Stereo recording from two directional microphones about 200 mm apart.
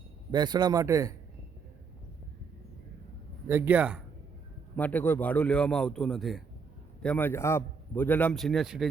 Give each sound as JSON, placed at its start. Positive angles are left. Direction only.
{"t": 0.3, "sound": "a man's voice", "side_deg": -20}
{"t": 3.5, "sound": "a man's voice", "side_deg": -10}
{"t": 4.8, "sound": "a man's voice", "side_deg": 10}